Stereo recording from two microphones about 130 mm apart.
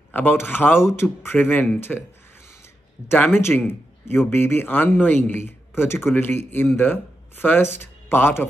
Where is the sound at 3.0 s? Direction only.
15° left (ahead or behind).